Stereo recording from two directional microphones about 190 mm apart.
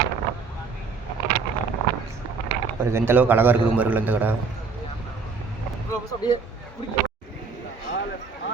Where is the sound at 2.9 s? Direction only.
10° right (ahead or behind).